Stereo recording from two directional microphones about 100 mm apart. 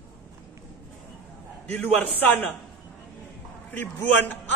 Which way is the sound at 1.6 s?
15° left (ahead or behind).